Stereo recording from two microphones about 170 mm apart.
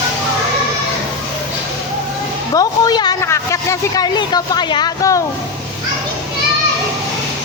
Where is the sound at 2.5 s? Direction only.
20° left (ahead or behind).